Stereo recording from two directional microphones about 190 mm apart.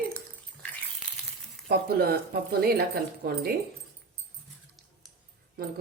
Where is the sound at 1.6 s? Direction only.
55° right (ahead or behind).